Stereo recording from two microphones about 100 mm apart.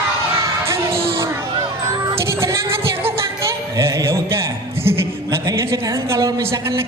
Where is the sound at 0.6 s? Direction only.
30° right (ahead or behind).